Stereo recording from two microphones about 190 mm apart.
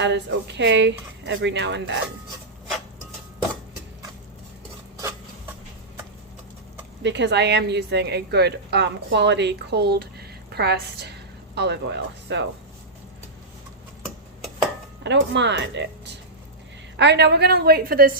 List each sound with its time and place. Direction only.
0.0 s speech: 65° right (ahead or behind)
7.0 s a woman's voice: 65° right (ahead or behind)
15.0 s a woman's voice: 65° right (ahead or behind); by 18.2 s 50° right (ahead or behind)